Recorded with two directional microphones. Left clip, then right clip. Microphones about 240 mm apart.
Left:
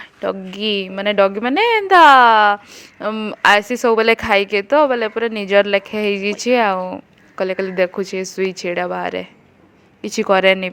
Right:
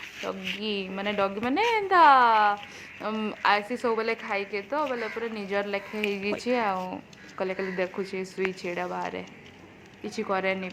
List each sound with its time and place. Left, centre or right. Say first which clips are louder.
0.2 s a woman's voice: left 11 dB; left